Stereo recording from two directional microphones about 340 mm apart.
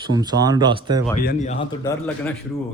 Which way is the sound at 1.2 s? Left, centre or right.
Left.